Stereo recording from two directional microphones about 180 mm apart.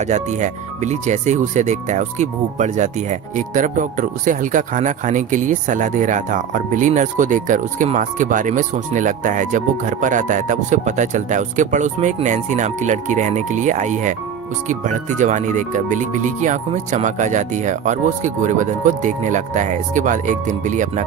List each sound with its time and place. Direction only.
0.0 s speech: 40° right (ahead or behind)